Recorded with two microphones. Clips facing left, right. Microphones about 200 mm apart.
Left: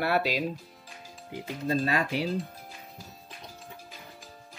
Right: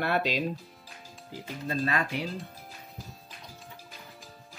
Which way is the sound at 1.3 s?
20° left (ahead or behind).